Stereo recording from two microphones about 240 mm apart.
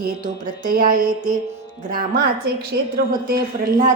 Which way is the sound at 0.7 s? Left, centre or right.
Right.